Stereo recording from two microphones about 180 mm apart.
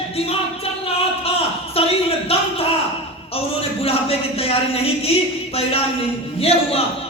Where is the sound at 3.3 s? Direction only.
35° left (ahead or behind).